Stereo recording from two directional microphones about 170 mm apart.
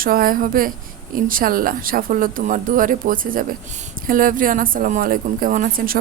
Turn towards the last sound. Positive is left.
turn(degrees=-55)  # may be behind; listen again after turning